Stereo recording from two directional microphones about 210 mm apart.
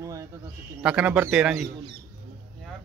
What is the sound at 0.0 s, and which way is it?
Bird, 15° right (ahead or behind).